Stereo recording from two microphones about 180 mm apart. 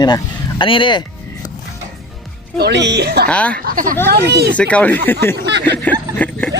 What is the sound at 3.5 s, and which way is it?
Speech, 50° right (ahead or behind).